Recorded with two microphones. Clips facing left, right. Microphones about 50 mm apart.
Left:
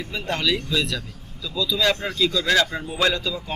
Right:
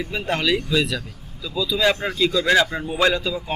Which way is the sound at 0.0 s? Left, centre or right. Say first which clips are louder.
Right 2 dB; centre.